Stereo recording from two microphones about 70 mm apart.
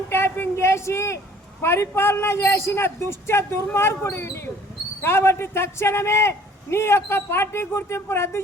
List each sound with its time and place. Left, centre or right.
0.1 s a woman's voice: left